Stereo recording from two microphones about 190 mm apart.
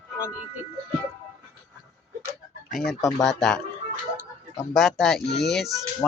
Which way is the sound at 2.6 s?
Centre (ahead or behind).